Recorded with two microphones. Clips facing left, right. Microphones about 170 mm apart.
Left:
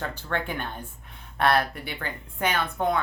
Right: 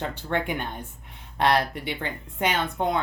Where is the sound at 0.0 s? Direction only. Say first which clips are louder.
Right 3 dB; 20° right (ahead or behind).